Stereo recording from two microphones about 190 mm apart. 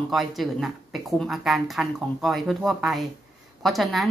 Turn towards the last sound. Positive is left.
turn(degrees=0)  # may be behind; listen again after turning